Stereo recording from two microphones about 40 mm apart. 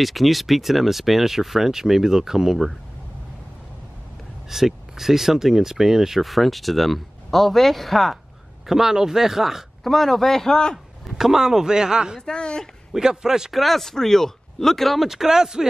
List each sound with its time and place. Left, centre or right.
0.0 s speech: centre
4.5 s speech: centre
6.2 s speech: centre
8.6 s speech: centre
9.8 s speech: centre
11.1 s speech: centre
12.2 s speech: left
12.9 s speech: centre
13.5 s speech: centre
15.0 s speech: centre